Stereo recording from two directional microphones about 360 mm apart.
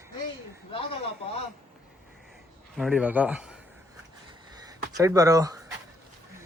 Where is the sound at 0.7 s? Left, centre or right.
Centre.